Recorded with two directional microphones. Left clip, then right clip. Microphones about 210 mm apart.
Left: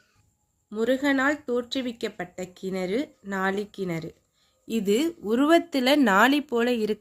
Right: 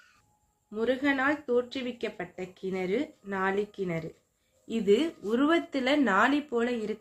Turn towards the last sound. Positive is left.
turn(degrees=55)  # may be behind; listen again after turning